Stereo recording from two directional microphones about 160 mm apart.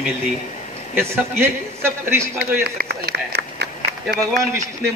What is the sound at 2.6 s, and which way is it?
Speech, 85° right.